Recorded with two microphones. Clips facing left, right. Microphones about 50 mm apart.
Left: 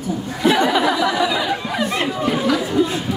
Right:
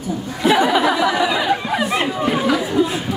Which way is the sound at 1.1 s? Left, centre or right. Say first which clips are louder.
Right 2 dB; right.